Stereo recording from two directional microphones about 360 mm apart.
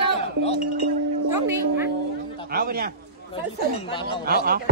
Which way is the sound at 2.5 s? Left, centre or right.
Right.